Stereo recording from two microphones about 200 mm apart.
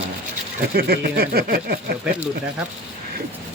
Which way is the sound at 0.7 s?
50° right (ahead or behind).